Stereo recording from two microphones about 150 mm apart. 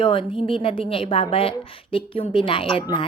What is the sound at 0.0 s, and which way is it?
A woman's voice, 35° left (ahead or behind).